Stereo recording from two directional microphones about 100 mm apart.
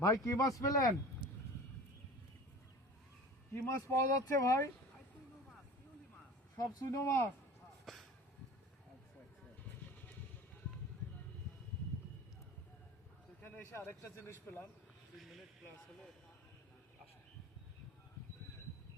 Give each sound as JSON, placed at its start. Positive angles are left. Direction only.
{"t": 0.0, "sound": "speech", "side_deg": 35}
{"t": 3.5, "sound": "speech", "side_deg": 30}
{"t": 6.6, "sound": "speech", "side_deg": 40}
{"t": 7.0, "sound": "a man's voice", "side_deg": 25}
{"t": 7.9, "sound": "vehicle", "side_deg": 0}
{"t": 13.7, "sound": "a man's voice", "side_deg": 25}
{"t": 15.2, "sound": "a sound", "side_deg": 0}